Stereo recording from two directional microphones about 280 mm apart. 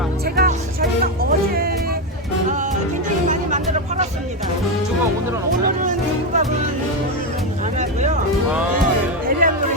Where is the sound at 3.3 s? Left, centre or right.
Right.